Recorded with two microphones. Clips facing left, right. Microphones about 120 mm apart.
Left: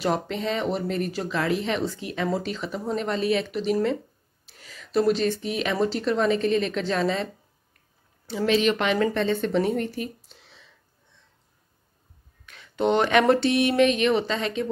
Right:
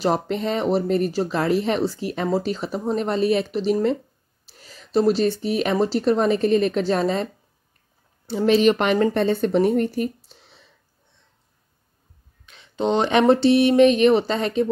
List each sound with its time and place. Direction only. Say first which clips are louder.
0.0 s speech: right 4 dB; 35° right (ahead or behind)
8.5 s a woman's voice: right 5 dB; 45° right (ahead or behind)
12.4 s a sound: right 1 dB; 20° right (ahead or behind)
13.3 s speech: right 5 dB; 35° right (ahead or behind)